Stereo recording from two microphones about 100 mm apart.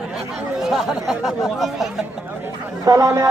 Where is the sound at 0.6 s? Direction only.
5° right (ahead or behind).